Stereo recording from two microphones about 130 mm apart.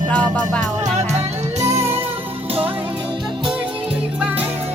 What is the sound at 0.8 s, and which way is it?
Music, 60° right (ahead or behind).